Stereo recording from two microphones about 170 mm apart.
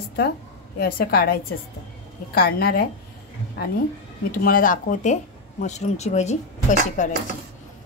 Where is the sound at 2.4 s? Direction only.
60° left (ahead or behind).